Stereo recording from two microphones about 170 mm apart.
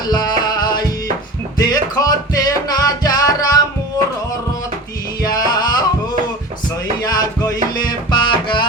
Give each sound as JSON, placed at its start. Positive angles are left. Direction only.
{"t": 0.1, "sound": "music", "side_deg": 25}
{"t": 5.2, "sound": "music", "side_deg": 25}
{"t": 7.0, "sound": "music", "side_deg": 25}